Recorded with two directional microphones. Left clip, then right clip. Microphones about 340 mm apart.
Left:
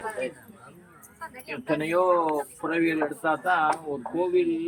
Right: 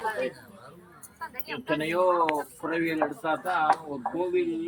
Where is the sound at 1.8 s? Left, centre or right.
Centre.